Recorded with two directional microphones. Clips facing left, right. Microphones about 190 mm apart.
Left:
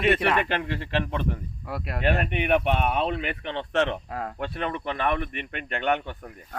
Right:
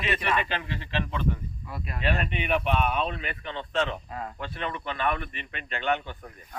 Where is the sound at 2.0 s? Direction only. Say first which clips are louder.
Left 4 dB; 55° left (ahead or behind).